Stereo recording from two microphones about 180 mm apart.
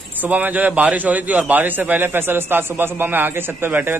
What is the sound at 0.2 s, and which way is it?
A man's voice, 10° right (ahead or behind).